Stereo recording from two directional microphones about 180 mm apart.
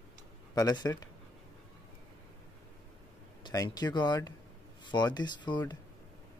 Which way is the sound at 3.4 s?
20° left (ahead or behind).